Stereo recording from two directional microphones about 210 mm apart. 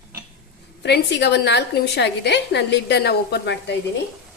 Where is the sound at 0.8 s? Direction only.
55° left (ahead or behind).